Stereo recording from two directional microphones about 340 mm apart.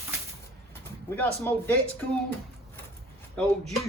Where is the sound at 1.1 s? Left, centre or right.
Centre.